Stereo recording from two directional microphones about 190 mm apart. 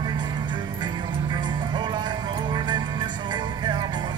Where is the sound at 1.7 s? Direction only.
25° right (ahead or behind).